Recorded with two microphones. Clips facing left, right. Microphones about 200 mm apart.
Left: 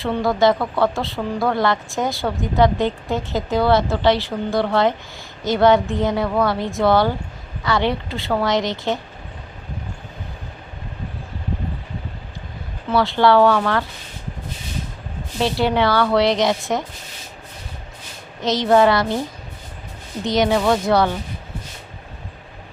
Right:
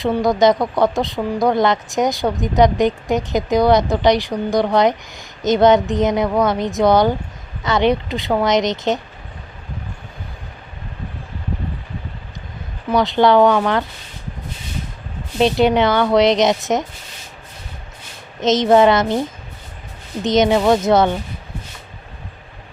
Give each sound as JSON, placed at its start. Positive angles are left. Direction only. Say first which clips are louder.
{"t": 0.0, "sound": "speech", "louder": "right 3 dB", "side_deg": -15}
{"t": 12.9, "sound": "speech", "louder": "right 2 dB", "side_deg": -15}
{"t": 15.4, "sound": "speech", "louder": "right 4 dB", "side_deg": -20}
{"t": 18.3, "sound": "speech", "louder": "right 3 dB", "side_deg": -20}
{"t": 20.2, "sound": "speech", "louder": "right 3 dB", "side_deg": -20}